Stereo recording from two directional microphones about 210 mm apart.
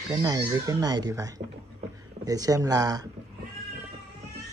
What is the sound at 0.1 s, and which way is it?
Speech, 20° right (ahead or behind).